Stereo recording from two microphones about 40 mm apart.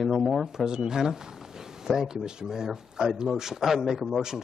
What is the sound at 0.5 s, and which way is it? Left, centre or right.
Speech, centre.